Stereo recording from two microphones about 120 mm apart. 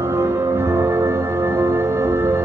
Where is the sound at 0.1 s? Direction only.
20° right (ahead or behind).